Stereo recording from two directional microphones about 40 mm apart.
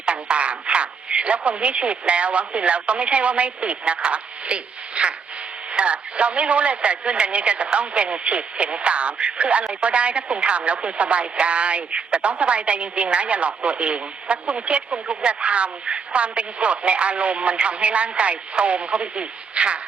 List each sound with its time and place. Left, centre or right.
0.0 s a man's voice: right